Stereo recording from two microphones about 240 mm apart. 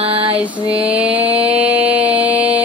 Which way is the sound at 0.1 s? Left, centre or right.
Right.